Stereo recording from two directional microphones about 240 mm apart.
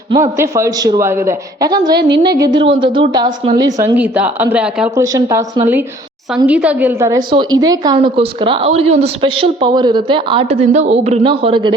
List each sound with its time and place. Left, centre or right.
0.1 s a woman's voice: centre
2.0 s a sound: right
2.2 s a woman's voice: centre